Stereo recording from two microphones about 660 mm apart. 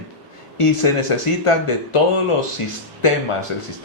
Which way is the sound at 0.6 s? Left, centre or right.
Left.